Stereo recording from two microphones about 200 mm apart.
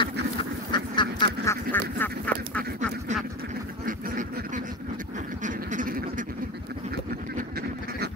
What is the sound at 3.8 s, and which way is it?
Duck, 45° right (ahead or behind).